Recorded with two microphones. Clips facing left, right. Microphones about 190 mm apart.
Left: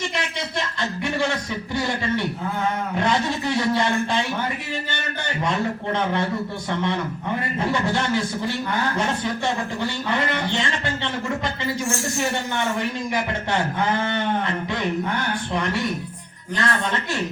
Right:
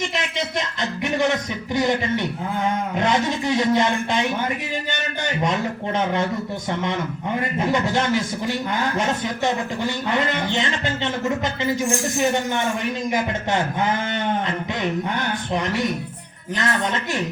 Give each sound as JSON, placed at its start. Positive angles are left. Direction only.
{"t": 0.0, "sound": "a man's voice", "side_deg": -20}